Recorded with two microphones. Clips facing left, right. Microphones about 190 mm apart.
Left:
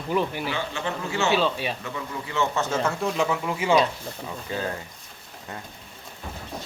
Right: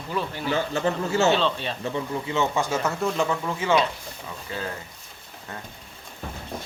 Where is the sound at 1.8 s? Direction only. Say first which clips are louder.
Right 5 dB; 30° right (ahead or behind).